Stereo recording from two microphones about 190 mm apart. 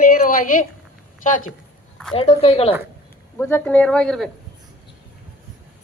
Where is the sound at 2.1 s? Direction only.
30° left (ahead or behind).